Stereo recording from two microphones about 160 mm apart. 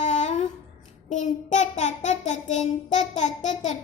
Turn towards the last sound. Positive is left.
turn(degrees=50)  # may be behind; listen again after turning